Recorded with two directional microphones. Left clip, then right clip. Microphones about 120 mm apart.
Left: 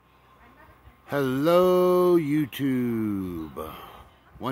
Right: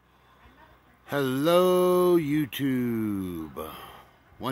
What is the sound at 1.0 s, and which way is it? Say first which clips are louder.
Speech: left 1 dB; 5° right (ahead or behind).